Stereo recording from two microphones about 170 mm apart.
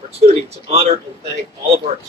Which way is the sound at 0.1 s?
35° right (ahead or behind).